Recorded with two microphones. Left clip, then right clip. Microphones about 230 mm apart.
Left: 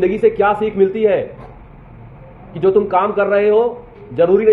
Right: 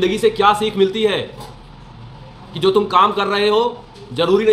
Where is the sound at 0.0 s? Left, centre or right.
Centre.